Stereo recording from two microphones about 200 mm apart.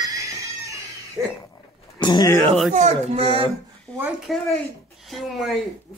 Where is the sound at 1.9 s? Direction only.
20° left (ahead or behind).